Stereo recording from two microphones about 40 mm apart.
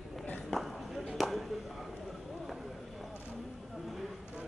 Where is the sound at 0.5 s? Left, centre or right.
Centre.